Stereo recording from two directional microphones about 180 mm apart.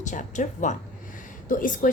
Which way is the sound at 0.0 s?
45° left (ahead or behind).